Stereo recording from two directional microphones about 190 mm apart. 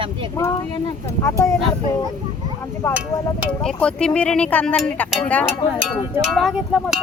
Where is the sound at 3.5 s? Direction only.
5° left (ahead or behind).